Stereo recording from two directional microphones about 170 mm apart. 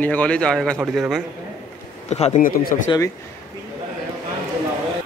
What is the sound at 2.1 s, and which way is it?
Speech, 40° left (ahead or behind).